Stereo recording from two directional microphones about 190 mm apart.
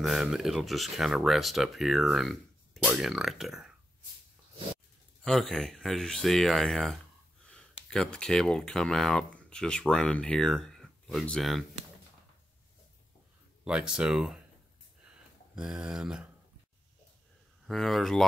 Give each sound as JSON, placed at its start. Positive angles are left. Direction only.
{"t": 0.0, "sound": "speech", "side_deg": 0}
{"t": 5.2, "sound": "speech", "side_deg": 5}
{"t": 13.7, "sound": "speech", "side_deg": -5}
{"t": 15.5, "sound": "speech", "side_deg": -5}
{"t": 17.6, "sound": "speech", "side_deg": 0}